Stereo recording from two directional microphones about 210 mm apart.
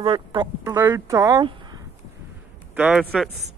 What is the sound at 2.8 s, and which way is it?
Speech, 5° right (ahead or behind).